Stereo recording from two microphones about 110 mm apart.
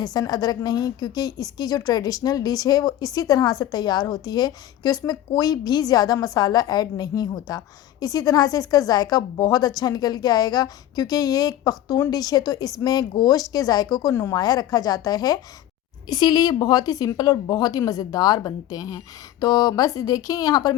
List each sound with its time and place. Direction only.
0.0 s a woman's voice: 35° left (ahead or behind)